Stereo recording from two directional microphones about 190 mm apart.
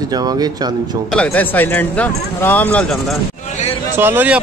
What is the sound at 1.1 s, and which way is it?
Speech, 10° left (ahead or behind).